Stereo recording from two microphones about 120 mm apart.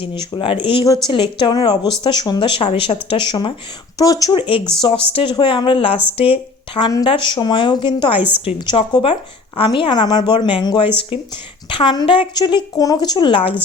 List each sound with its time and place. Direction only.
0.0 s a woman's voice: 45° left (ahead or behind)
3.9 s speech: 30° left (ahead or behind)
4.4 s speech: 45° left (ahead or behind)
6.8 s a woman's voice: 35° left (ahead or behind)